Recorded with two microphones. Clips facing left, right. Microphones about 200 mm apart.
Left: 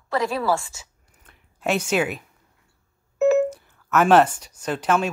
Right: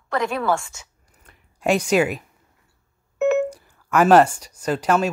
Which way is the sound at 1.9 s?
10° right (ahead or behind).